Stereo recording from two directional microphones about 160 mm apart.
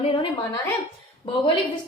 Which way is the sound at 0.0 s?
35° left (ahead or behind).